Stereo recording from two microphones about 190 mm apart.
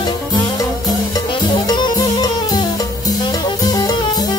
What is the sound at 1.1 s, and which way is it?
Music, 20° left (ahead or behind).